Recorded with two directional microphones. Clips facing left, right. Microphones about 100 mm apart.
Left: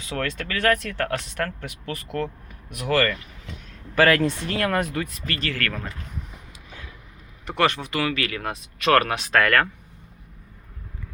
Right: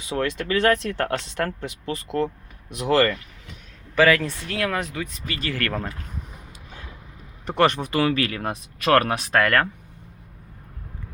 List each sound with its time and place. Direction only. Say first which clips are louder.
0.0 s speech: right 3 dB; 20° right (ahead or behind)
3.9 s speech: even; 5° left (ahead or behind)
5.2 s speech: left 1 dB; 10° right (ahead or behind)
5.5 s speech: right 2 dB; 25° right (ahead or behind)
7.4 s speech: right 3 dB; 25° right (ahead or behind)